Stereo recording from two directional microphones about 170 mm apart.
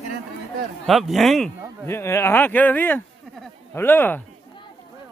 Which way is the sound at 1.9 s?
15° left (ahead or behind).